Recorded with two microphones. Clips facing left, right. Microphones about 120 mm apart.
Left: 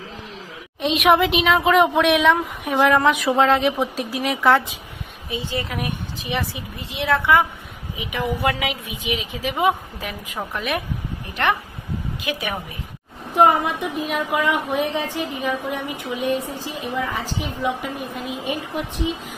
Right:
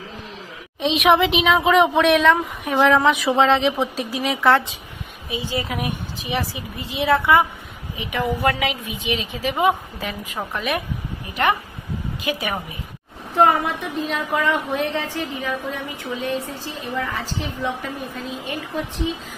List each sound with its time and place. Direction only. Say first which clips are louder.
0.7 s a woman's voice: even; centre (ahead or behind)
5.3 s a woman's voice: right 1 dB; 5° right (ahead or behind)
12.2 s a woman's voice: right 3 dB; centre (ahead or behind)
13.3 s a woman's voice: left 1 dB; 15° left (ahead or behind)